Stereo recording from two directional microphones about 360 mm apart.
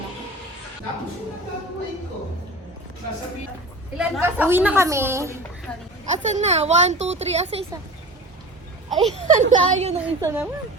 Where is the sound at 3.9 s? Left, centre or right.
Centre.